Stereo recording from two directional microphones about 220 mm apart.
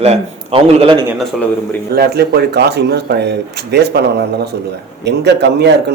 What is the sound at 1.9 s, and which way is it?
Speech, 45° right (ahead or behind).